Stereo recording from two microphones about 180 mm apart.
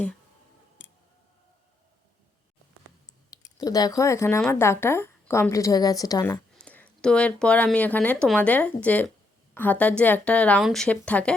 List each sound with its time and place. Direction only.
3.2 s speech: 20° left (ahead or behind)
6.6 s speech: 5° left (ahead or behind)